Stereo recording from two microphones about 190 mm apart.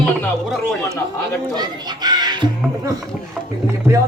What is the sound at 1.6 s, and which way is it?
Speech, 20° right (ahead or behind).